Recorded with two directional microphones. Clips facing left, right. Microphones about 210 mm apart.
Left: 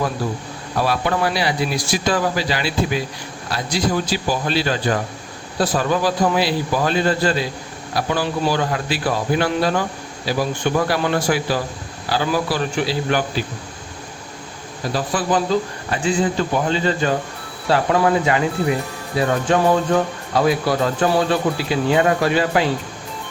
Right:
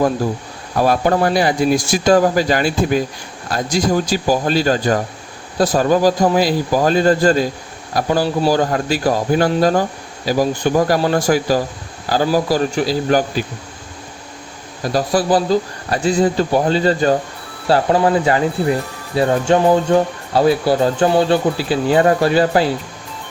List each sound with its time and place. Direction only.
0.8 s speech: 45° right (ahead or behind)
14.9 s speech: 35° right (ahead or behind)